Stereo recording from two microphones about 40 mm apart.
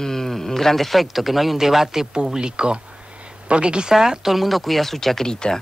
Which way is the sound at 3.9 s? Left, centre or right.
Centre.